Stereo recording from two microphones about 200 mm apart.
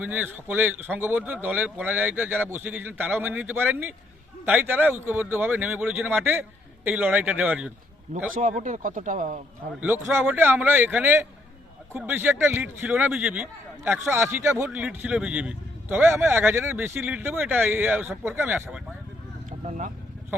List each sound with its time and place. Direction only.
0.0 s speech: 10° right (ahead or behind)
8.1 s speech: 40° right (ahead or behind)
10.2 s speech: 10° right (ahead or behind)
19.5 s vehicle: 40° right (ahead or behind)